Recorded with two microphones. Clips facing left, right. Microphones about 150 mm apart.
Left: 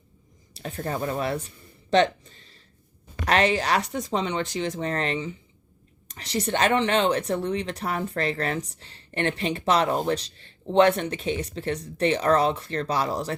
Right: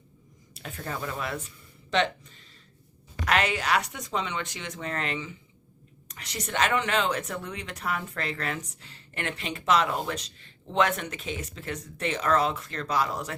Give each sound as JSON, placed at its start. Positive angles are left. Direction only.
{"t": 0.5, "sound": "a woman's voice", "side_deg": 35}